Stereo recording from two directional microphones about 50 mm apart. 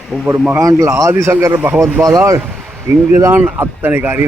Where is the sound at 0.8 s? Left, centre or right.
Right.